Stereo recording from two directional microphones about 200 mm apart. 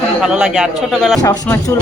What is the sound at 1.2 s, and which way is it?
Speech, 20° left (ahead or behind).